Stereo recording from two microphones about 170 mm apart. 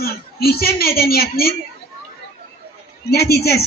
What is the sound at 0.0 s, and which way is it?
A woman's voice, 65° left (ahead or behind).